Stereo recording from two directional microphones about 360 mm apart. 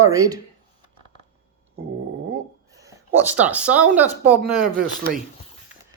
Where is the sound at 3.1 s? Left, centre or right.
Centre.